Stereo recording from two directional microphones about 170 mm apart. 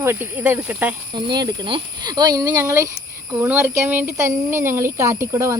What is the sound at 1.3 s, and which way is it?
Speech, 25° right (ahead or behind).